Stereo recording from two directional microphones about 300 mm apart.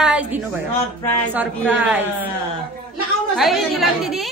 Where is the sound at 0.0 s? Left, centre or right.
Centre.